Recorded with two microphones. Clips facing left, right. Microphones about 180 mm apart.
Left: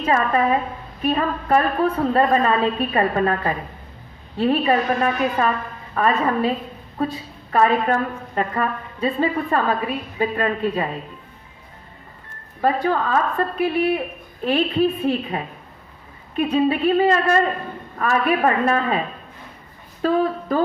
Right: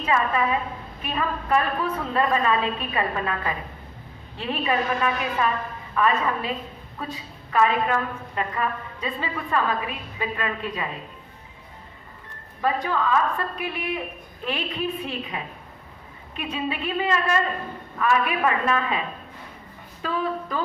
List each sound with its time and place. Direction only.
0.0 s a woman's voice: 40° left (ahead or behind)
12.6 s a woman's voice: 40° left (ahead or behind)
20.0 s a sound: 40° left (ahead or behind)